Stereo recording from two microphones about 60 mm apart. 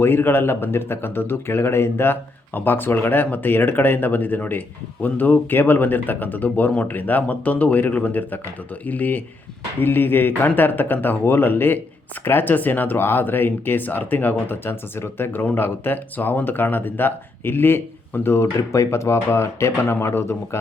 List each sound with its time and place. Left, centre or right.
0.0 s a man's voice: left
18.7 s speech: left